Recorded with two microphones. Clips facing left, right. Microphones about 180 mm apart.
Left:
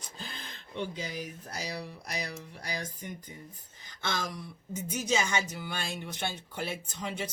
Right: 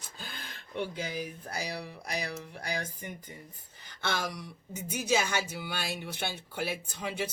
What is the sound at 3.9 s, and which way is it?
Speech, 65° right (ahead or behind).